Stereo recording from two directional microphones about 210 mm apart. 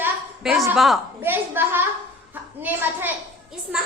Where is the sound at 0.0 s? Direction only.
Centre (ahead or behind).